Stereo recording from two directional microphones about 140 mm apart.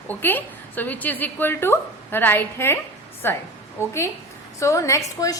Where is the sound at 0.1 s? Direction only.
15° left (ahead or behind).